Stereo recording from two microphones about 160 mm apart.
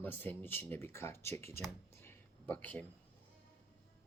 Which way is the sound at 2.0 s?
10° left (ahead or behind).